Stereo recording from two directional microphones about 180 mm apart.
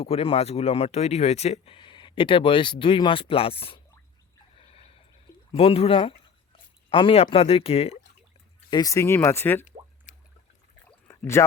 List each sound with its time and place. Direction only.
0.0 s speech: 35° left (ahead or behind)
4.5 s a sound: 30° left (ahead or behind)
5.5 s speech: 35° left (ahead or behind)
8.7 s speech: 20° left (ahead or behind)
10.1 s a sound: 45° left (ahead or behind)
11.2 s speech: 15° left (ahead or behind)